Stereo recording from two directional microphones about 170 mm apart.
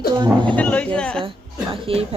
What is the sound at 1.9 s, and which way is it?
Speech, 35° right (ahead or behind).